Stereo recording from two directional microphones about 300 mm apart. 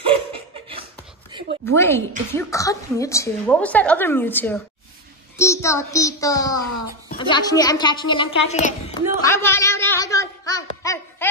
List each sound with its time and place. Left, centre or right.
0.0 s laughter: centre
1.7 s a woman's voice: centre
9.2 s a sound: centre